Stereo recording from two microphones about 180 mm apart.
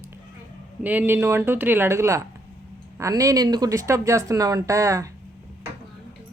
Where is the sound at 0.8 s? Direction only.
10° right (ahead or behind).